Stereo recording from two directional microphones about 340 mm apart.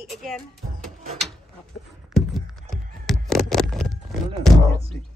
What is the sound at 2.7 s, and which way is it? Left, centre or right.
Horse, centre.